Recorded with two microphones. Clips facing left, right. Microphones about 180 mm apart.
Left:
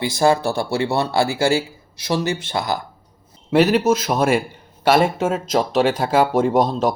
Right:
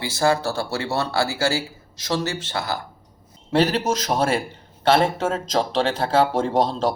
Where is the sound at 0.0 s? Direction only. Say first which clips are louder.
Left 4 dB; 15° left (ahead or behind).